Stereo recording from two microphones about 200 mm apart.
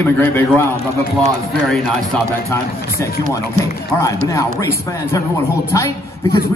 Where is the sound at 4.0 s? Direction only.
15° left (ahead or behind).